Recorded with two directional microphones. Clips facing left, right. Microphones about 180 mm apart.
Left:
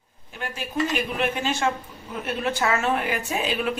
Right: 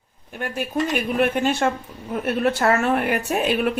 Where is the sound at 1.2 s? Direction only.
55° right (ahead or behind).